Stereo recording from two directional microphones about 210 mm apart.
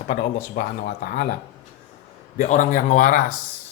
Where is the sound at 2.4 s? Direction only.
35° left (ahead or behind).